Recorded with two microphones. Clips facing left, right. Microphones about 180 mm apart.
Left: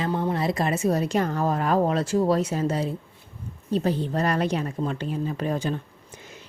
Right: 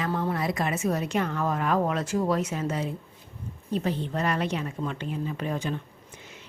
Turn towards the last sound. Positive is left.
turn(degrees=35)  # may be behind; listen again after turning